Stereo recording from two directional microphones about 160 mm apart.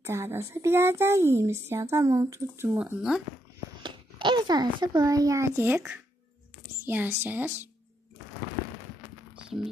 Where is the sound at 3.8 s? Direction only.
30° right (ahead or behind); by 7.7 s 10° right (ahead or behind).